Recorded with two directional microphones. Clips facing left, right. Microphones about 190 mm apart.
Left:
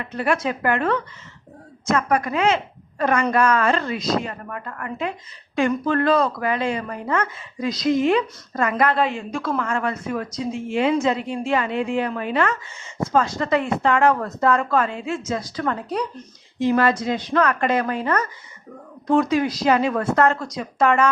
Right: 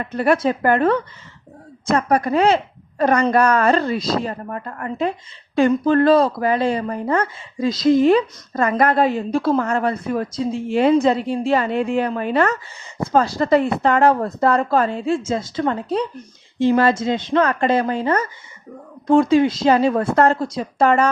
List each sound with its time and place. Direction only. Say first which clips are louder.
0.0 s a woman's voice: right 5 dB; 40° right (ahead or behind)